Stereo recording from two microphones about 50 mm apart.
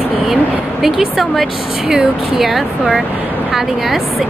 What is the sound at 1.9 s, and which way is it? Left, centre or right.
A woman's voice, centre.